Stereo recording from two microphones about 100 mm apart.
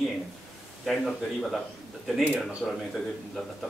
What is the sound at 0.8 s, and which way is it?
Speech, centre (ahead or behind).